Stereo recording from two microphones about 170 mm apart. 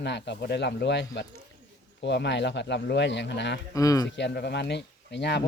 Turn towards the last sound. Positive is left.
turn(degrees=90)